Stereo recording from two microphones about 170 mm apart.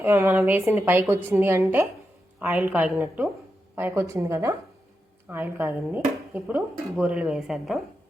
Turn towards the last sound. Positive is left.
turn(degrees=0)  # may be behind; listen again after turning